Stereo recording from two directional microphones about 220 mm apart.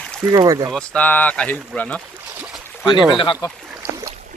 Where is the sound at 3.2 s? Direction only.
20° left (ahead or behind).